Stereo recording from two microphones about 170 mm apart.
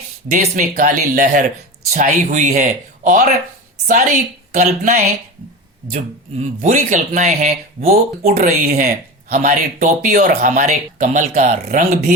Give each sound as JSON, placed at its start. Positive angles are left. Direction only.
{"t": 0.3, "sound": "speech", "side_deg": -50}